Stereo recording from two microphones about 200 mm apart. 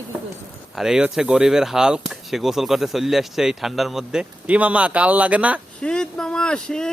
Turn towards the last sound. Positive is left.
turn(degrees=5)  # may be behind; listen again after turning